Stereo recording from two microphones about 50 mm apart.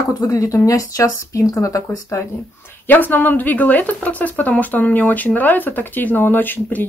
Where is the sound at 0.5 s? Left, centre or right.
Left.